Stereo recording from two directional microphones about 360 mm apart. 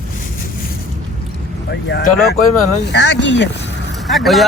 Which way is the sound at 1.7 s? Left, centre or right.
Left.